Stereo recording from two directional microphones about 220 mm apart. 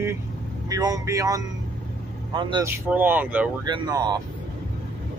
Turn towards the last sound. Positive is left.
turn(degrees=-15)  # may be behind; listen again after turning